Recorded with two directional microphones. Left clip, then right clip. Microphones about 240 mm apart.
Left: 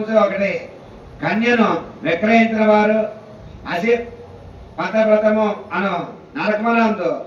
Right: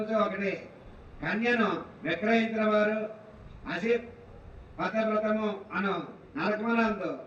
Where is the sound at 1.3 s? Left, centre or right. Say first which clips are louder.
Left 11 dB; right.